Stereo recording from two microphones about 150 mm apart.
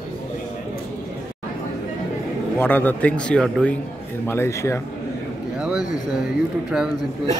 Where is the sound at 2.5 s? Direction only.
15° left (ahead or behind).